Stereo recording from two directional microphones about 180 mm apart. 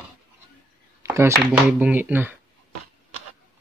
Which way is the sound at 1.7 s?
10° right (ahead or behind).